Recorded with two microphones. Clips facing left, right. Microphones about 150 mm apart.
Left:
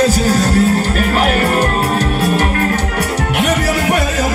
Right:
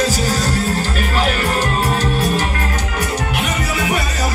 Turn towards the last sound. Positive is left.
turn(degrees=60)  # may be behind; listen again after turning